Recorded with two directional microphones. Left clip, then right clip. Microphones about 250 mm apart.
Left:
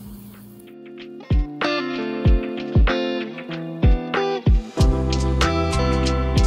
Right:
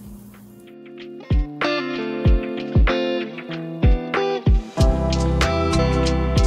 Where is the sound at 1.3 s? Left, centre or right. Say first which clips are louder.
Right 1 dB; centre.